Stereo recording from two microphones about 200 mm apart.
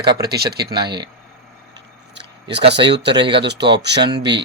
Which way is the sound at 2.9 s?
60° right (ahead or behind).